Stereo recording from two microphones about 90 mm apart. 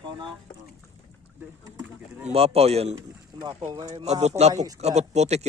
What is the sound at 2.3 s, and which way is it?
Speech, 90° right.